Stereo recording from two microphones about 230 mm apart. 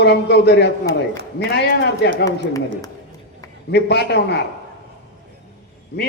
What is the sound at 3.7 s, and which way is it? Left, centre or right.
Speech, left.